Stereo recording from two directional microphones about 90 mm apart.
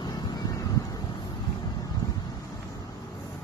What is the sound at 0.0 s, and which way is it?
Vehicle, 50° left (ahead or behind).